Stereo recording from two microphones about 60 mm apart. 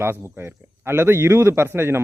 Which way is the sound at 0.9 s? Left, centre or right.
Right.